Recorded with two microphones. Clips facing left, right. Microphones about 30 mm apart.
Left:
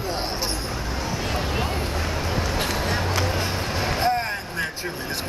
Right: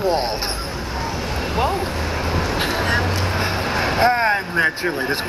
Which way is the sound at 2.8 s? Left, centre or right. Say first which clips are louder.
Right 4 dB; right.